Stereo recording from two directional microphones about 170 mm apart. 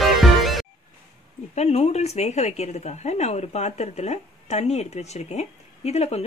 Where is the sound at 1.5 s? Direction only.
40° left (ahead or behind).